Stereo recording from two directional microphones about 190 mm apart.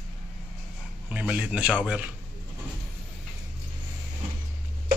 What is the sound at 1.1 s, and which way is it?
Speech, 5° right (ahead or behind).